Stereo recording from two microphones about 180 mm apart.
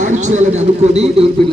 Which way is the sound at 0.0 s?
40° right (ahead or behind).